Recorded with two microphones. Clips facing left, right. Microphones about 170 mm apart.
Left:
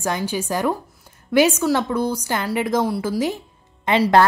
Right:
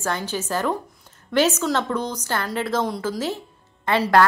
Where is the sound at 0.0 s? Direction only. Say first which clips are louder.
Left 3 dB; 10° left (ahead or behind).